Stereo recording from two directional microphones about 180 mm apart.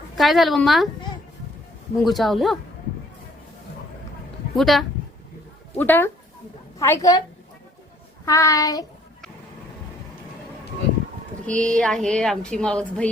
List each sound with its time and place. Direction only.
0.2 s a woman's voice: centre (ahead or behind)
2.0 s a woman's voice: centre (ahead or behind)
4.5 s a woman's voice: centre (ahead or behind); by 7.2 s 15° left (ahead or behind)
8.2 s child singing: 15° left (ahead or behind)
11.4 s a woman's voice: 5° left (ahead or behind)